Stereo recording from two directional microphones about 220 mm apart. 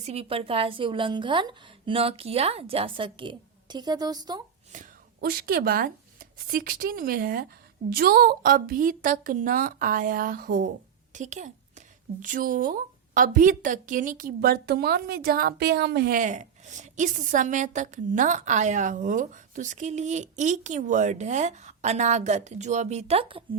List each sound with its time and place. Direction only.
0.0 s a woman's voice: 30° right (ahead or behind)
4.7 s a woman's voice: 40° right (ahead or behind)